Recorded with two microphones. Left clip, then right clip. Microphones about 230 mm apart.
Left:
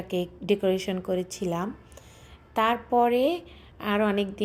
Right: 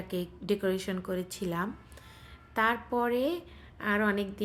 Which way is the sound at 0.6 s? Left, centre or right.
Centre.